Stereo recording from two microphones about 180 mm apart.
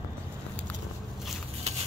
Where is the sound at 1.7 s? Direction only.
40° right (ahead or behind).